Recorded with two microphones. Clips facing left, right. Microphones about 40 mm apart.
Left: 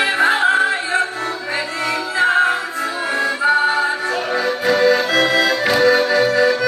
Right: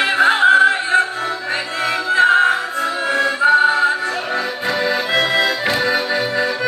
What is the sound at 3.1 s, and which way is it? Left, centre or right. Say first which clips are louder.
Music: right 2 dB; centre.